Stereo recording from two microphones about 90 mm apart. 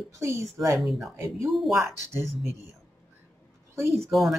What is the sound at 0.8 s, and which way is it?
Speech, centre (ahead or behind).